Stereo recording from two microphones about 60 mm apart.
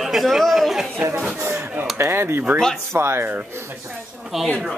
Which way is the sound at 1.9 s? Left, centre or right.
Right.